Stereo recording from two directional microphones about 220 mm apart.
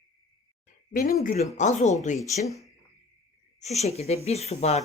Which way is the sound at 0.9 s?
40° left (ahead or behind).